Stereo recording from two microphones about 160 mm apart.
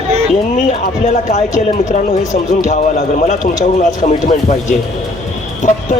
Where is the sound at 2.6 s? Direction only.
45° left (ahead or behind).